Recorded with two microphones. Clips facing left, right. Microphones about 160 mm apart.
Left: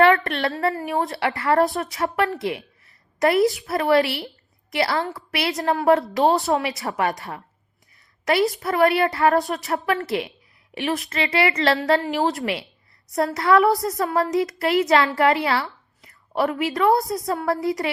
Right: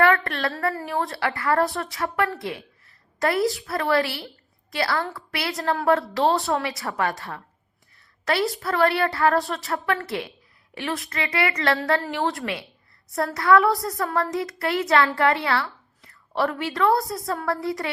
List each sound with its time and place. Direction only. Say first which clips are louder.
0.3 s a woman's voice: left 3 dB; 20° left (ahead or behind)